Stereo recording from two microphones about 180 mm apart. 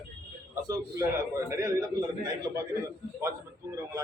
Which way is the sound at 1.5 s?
20° right (ahead or behind).